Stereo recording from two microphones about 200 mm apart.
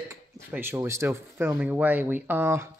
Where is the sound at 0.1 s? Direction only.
10° right (ahead or behind).